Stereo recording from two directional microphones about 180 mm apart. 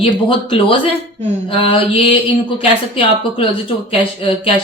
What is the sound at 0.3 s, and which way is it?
Speech, 30° left (ahead or behind).